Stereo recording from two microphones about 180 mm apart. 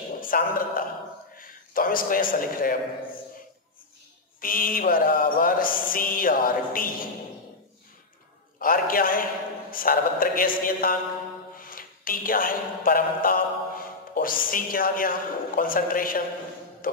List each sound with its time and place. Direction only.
0.2 s a man's voice: 50° left (ahead or behind)
4.4 s mantra: 50° left (ahead or behind)
8.5 s mantra: 50° left (ahead or behind)
11.5 s a sound: 50° left (ahead or behind)
16.8 s music: 50° left (ahead or behind)